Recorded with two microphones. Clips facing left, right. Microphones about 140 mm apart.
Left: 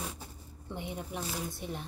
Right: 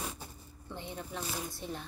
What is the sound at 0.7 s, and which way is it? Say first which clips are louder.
A woman's voice: left 2 dB; 15° left (ahead or behind).